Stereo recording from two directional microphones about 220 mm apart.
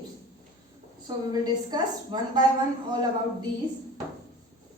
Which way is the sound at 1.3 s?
20° right (ahead or behind).